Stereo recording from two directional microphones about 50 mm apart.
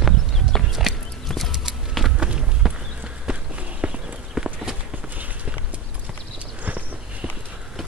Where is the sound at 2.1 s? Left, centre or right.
Centre.